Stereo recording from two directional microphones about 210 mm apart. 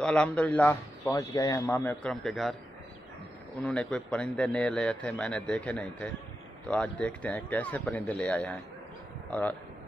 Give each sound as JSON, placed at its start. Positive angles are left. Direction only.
{"t": 0.0, "sound": "a man's voice", "side_deg": 5}
{"t": 2.0, "sound": "a man's voice", "side_deg": 0}
{"t": 3.6, "sound": "a man's voice", "side_deg": 5}